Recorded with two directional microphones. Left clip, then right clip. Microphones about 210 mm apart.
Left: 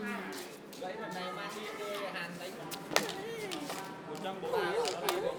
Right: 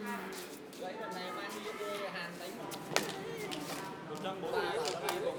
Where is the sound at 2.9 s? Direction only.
40° left (ahead or behind).